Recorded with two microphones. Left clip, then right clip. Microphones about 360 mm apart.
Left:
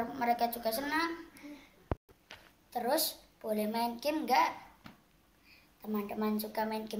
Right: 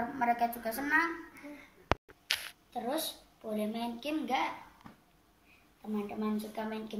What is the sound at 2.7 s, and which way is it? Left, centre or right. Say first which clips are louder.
A woman's voice: left 4 dB; centre.